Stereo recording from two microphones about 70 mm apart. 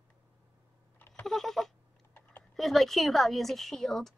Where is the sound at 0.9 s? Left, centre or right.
Left.